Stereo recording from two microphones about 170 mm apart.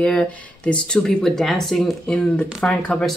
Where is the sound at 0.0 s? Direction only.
5° left (ahead or behind).